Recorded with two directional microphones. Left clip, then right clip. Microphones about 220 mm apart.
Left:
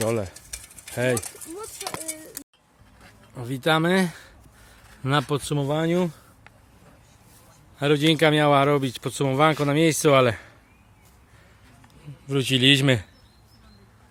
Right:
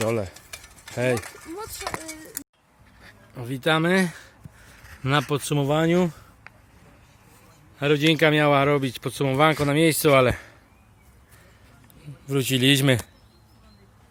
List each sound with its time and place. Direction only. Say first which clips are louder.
0.1 s speech: even; centre (ahead or behind)
0.3 s a sound: even; 20° right (ahead or behind)
0.9 s speech: even; centre (ahead or behind)
1.2 s speech: right 2 dB; 25° right (ahead or behind)
1.8 s clip-clop: right 1 dB; 25° right (ahead or behind)
3.3 s speech: even; 5° left (ahead or behind)
5.6 s speech: right 3 dB; 10° right (ahead or behind)
7.8 s speech: even; 5° left (ahead or behind)
12.0 s speech: even; centre (ahead or behind)